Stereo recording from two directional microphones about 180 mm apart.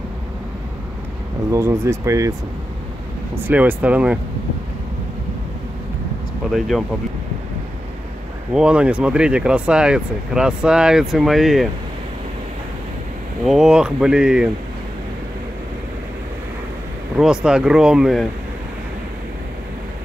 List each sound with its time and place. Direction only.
1.5 s speech: 15° right (ahead or behind)
3.4 s speech: 10° right (ahead or behind)
8.5 s speech: 5° right (ahead or behind)
13.5 s speech: 5° right (ahead or behind)
17.2 s speech: 5° right (ahead or behind)